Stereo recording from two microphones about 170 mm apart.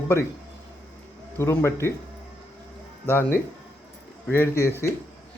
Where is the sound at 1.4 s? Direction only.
15° left (ahead or behind).